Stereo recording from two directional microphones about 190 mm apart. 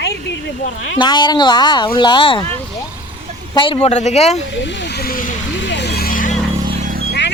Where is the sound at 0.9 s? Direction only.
25° left (ahead or behind).